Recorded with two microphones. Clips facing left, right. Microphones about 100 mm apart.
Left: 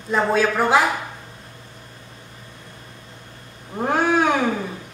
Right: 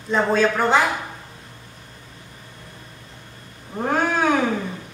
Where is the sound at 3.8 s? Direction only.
5° left (ahead or behind).